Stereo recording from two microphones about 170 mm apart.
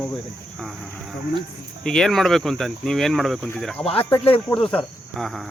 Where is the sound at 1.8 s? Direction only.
5° left (ahead or behind).